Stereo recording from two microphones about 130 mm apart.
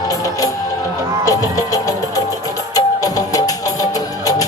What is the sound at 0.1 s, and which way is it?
Music, 25° left (ahead or behind).